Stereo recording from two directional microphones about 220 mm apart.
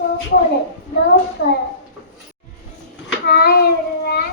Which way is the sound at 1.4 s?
50° left (ahead or behind).